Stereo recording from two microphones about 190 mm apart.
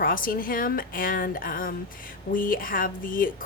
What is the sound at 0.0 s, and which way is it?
A woman's voice, 50° left (ahead or behind).